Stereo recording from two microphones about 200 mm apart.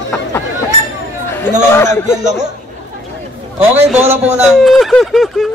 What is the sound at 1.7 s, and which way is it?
Speech, 15° left (ahead or behind).